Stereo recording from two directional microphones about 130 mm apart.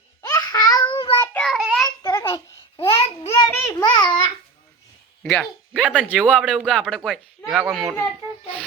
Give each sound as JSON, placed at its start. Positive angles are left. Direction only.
{"t": 0.2, "sound": "babbling", "side_deg": 30}
{"t": 0.9, "sound": "child singing", "side_deg": 40}
{"t": 1.2, "sound": "child singing", "side_deg": 15}
{"t": 1.5, "sound": "child singing", "side_deg": 0}
{"t": 2.0, "sound": "a sound", "side_deg": 25}
{"t": 2.7, "sound": "babbling", "side_deg": 50}
{"t": 3.4, "sound": "a sound", "side_deg": 30}
{"t": 5.2, "sound": "speech", "side_deg": 5}
{"t": 5.7, "sound": "a child's voice", "side_deg": -10}